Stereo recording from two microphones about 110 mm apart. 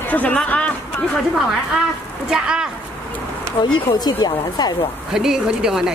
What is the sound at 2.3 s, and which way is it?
Speech, 5° right (ahead or behind).